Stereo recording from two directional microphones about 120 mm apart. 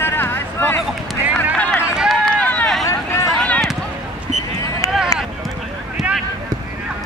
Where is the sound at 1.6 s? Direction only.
10° left (ahead or behind).